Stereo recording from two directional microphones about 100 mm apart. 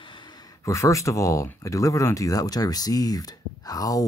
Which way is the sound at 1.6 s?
35° left (ahead or behind).